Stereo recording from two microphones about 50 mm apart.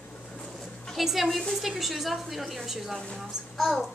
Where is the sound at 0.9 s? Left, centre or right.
Centre.